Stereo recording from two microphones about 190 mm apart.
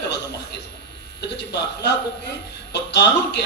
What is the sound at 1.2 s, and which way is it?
A man's voice, 65° left (ahead or behind).